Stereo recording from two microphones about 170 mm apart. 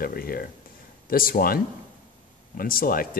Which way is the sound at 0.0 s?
60° left (ahead or behind).